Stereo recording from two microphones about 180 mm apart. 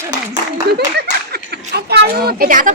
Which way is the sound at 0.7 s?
60° right (ahead or behind).